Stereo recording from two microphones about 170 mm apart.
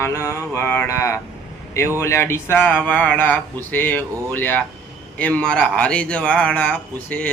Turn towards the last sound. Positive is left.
turn(degrees=10)  # may be behind; listen again after turning